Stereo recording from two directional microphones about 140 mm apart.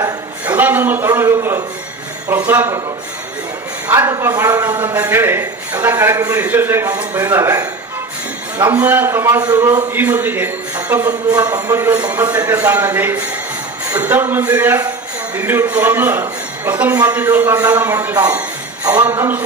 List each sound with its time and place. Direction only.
0.4 s a sound: 10° right (ahead or behind)
2.3 s a man's voice: 15° right (ahead or behind)
3.8 s a man's voice: 20° right (ahead or behind)
9.9 s a man's voice: 15° right (ahead or behind)
11.5 s a man's voice: 25° right (ahead or behind)
12.1 s a man's voice: 15° right (ahead or behind)